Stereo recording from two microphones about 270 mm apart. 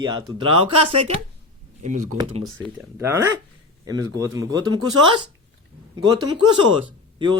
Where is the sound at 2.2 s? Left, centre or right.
Right.